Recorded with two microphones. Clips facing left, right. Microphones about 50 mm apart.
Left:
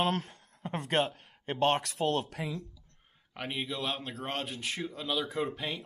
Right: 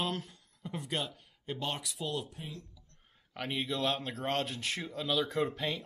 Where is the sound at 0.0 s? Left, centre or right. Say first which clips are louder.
Left 6 dB; left.